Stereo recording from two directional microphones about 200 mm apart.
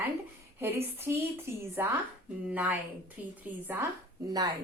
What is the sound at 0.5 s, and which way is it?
A woman's voice, 10° right (ahead or behind).